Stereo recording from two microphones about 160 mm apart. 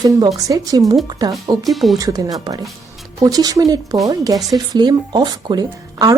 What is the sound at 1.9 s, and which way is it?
Speech, 20° right (ahead or behind).